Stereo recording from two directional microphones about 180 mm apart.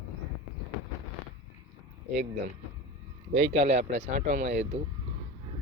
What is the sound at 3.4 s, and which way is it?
Speech, 35° right (ahead or behind).